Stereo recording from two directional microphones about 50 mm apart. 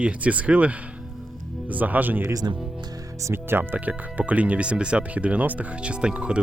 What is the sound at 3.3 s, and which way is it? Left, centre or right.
Speech, right.